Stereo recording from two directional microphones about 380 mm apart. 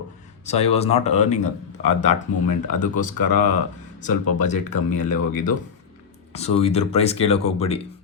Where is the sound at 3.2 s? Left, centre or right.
Left.